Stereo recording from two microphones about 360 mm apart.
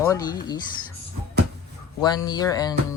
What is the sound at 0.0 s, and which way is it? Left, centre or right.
Speech, centre.